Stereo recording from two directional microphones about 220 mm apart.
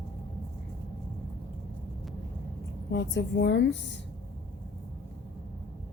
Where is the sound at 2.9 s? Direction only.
50° left (ahead or behind).